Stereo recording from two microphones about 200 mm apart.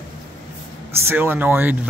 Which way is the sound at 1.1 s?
10° right (ahead or behind).